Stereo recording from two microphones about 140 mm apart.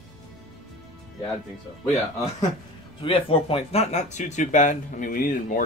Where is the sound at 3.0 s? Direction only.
40° left (ahead or behind); by 5.6 s 75° left (ahead or behind).